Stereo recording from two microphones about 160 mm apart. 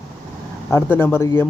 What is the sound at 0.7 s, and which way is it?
Speech, 15° left (ahead or behind).